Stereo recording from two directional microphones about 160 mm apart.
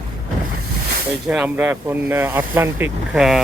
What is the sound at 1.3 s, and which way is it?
Speech, 10° right (ahead or behind).